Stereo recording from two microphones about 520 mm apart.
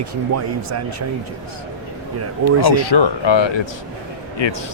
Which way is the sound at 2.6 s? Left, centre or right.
Left.